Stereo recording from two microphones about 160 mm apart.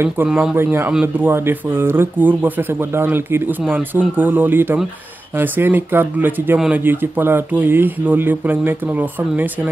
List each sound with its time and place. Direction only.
0.0 s speech: 10° right (ahead or behind)